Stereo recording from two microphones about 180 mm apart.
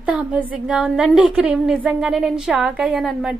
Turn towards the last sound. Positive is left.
turn(degrees=-5)  # may be behind; listen again after turning